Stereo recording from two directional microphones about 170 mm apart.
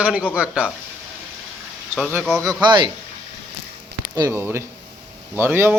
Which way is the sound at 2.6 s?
25° right (ahead or behind).